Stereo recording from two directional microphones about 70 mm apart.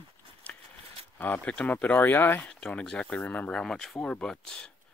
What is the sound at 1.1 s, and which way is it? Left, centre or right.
Speech, left.